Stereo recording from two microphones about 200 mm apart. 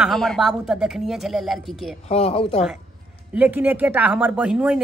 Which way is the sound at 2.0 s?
30° left (ahead or behind).